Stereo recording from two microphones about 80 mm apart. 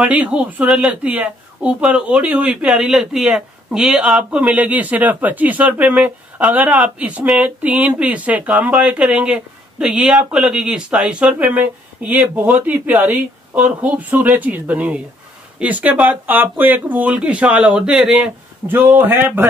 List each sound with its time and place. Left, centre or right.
0.1 s speech: centre
0.7 s speech: centre
1.0 s speech: centre
2.5 s speech: centre
18.7 s speech: right